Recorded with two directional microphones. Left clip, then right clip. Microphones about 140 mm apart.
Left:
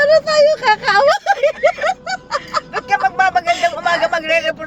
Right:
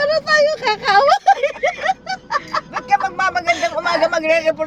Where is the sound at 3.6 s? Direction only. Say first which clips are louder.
Left 1 dB; 20° right (ahead or behind).